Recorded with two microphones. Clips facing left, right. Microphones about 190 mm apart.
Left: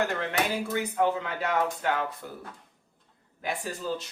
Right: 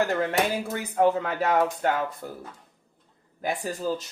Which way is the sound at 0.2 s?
45° right (ahead or behind).